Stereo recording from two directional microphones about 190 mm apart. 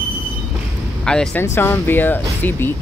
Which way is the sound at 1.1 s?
5° left (ahead or behind).